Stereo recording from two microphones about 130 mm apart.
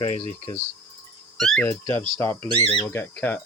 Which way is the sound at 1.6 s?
20° left (ahead or behind).